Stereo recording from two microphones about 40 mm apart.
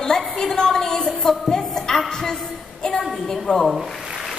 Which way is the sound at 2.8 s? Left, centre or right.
Centre.